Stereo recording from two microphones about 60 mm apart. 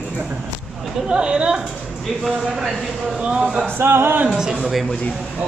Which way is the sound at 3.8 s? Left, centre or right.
Right.